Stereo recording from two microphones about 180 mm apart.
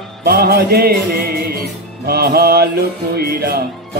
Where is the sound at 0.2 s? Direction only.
55° right (ahead or behind).